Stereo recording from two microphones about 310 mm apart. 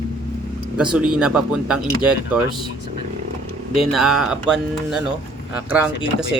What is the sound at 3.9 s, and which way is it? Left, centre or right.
Speech, centre.